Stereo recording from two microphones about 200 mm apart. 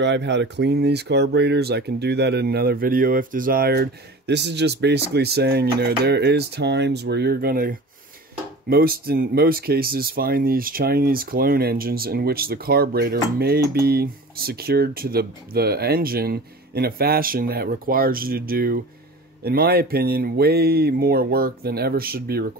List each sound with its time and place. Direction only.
0.0 s speech: 60° right (ahead or behind)